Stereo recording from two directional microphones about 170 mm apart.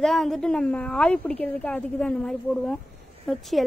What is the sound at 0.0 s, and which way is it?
A woman's voice, centre (ahead or behind).